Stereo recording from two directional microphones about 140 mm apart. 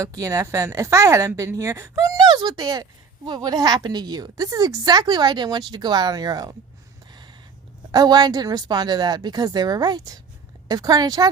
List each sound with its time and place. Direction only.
0.0 s a woman's voice: 25° right (ahead or behind)
7.1 s a sound: 30° right (ahead or behind)
7.9 s a woman's voice: 30° right (ahead or behind)